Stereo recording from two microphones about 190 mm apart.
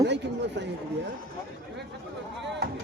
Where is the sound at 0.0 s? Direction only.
65° right (ahead or behind).